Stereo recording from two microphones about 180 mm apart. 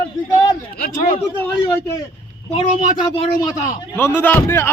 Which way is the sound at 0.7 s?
55° left (ahead or behind).